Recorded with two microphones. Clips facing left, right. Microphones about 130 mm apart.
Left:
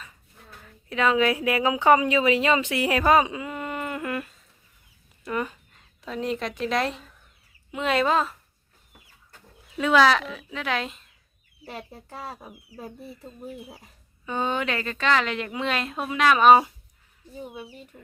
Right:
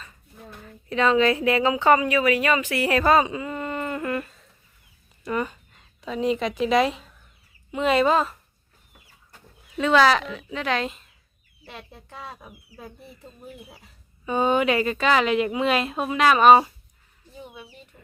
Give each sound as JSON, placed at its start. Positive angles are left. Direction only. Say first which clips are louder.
{"t": 0.6, "sound": "a woman's voice", "louder": "right 2 dB", "side_deg": 5}
{"t": 9.7, "sound": "speech", "louder": "right 1 dB", "side_deg": 5}
{"t": 11.6, "sound": "speech", "louder": "left 4 dB", "side_deg": 40}
{"t": 12.0, "sound": "speech", "louder": "even", "side_deg": 10}
{"t": 14.3, "sound": "a woman's voice", "louder": "right 6 dB", "side_deg": -10}
{"t": 17.9, "sound": "speech", "louder": "left 5 dB", "side_deg": 0}